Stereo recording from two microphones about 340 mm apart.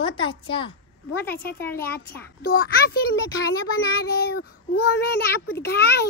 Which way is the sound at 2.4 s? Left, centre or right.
Left.